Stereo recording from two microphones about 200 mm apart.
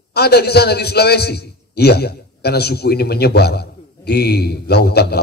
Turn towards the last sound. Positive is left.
turn(degrees=55)  # may be behind; listen again after turning